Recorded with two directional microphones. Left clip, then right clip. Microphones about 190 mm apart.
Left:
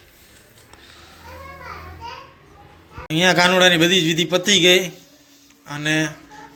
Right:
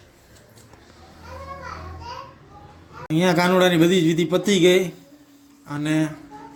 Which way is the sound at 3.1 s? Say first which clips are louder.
Left 4 dB; 10° right (ahead or behind).